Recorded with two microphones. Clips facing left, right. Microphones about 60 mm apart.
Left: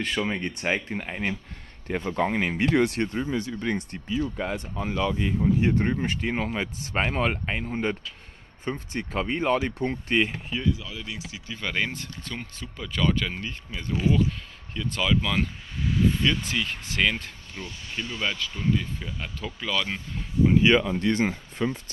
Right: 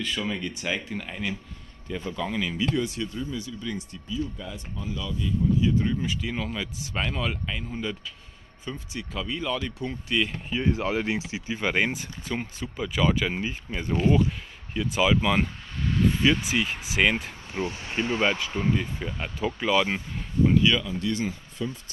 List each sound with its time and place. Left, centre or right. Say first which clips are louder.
0.3 s speech: left 3 dB; left
1.9 s speech: left 5 dB; left
6.3 s speech: left 3 dB; left
10.7 s speech: right 7 dB; right
11.1 s speech: right 7 dB; right
14.7 s speech: right 3 dB; centre
15.8 s a sound: even; centre
16.2 s speech: right 3 dB; centre
20.5 s speech: left 4 dB; left
20.8 s speech: left 4 dB; left